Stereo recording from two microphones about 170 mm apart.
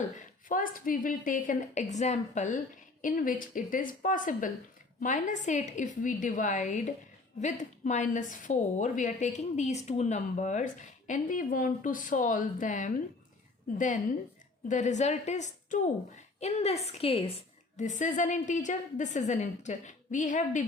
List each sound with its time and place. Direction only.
0.1 s a woman's voice: 50° left (ahead or behind)